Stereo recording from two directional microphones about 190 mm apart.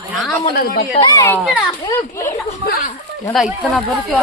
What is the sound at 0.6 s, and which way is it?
Speech, 55° left (ahead or behind).